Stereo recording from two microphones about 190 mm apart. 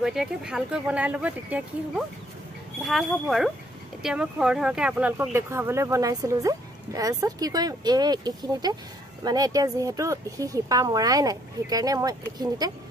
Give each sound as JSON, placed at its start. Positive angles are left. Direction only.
{"t": 0.0, "sound": "speech", "side_deg": -5}